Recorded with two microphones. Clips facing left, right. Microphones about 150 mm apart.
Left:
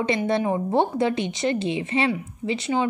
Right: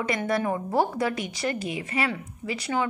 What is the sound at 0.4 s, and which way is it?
Speech, 20° left (ahead or behind).